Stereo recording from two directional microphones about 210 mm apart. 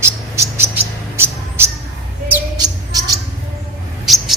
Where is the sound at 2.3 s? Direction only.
15° right (ahead or behind).